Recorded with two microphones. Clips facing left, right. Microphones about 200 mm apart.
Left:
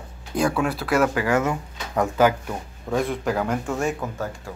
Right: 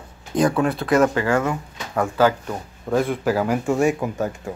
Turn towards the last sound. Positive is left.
turn(degrees=-20)  # may be behind; listen again after turning